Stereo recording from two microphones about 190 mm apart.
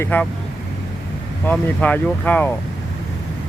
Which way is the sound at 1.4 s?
5° left (ahead or behind).